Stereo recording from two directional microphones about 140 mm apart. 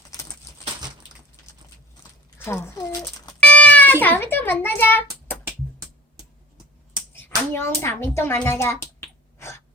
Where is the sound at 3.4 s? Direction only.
10° left (ahead or behind).